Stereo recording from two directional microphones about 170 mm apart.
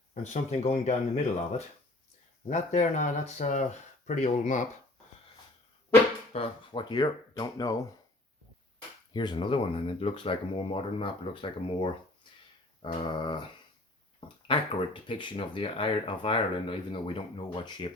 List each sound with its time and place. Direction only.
0.1 s speech: 45° left (ahead or behind)
6.3 s speech: 30° left (ahead or behind)
9.1 s speech: 25° left (ahead or behind)
14.2 s a sound: 30° left (ahead or behind)
15.0 s speech: 30° left (ahead or behind)